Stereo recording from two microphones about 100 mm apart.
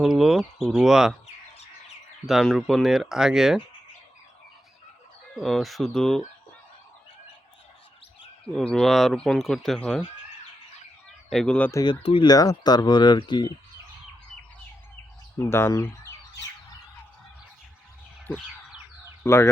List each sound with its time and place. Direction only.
0.0 s speech: centre (ahead or behind)
2.2 s speech: centre (ahead or behind)
5.3 s speech: 5° left (ahead or behind)
8.5 s speech: 5° left (ahead or behind)
11.3 s speech: 5° left (ahead or behind)
12.2 s speech: 40° left (ahead or behind)
15.4 s speech: 25° left (ahead or behind)
19.2 s speech: 25° left (ahead or behind)